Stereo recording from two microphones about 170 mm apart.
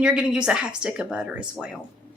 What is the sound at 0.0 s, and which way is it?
Speech, 5° right (ahead or behind).